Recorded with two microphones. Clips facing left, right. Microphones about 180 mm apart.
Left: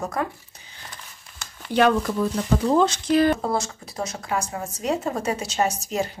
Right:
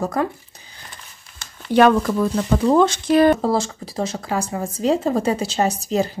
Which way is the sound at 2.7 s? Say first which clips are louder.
Right 4 dB; 55° right (ahead or behind).